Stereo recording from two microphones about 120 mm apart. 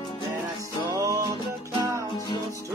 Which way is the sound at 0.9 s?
30° right (ahead or behind).